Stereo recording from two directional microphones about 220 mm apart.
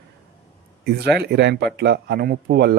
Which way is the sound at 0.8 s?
45° right (ahead or behind).